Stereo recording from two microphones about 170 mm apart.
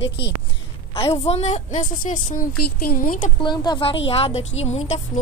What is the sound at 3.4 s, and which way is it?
A woman's voice, 25° left (ahead or behind).